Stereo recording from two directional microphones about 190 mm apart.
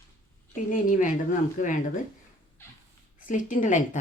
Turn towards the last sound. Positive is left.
turn(degrees=40)  # may be behind; listen again after turning